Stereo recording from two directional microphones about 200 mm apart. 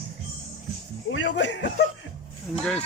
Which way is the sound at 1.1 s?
65° left (ahead or behind).